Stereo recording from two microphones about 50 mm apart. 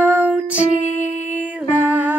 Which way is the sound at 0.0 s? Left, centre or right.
Right.